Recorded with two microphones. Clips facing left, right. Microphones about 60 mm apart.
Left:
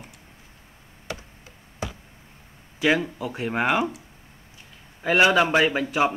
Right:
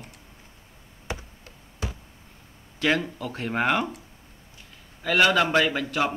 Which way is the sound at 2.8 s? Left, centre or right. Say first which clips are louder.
Left 2 dB; centre.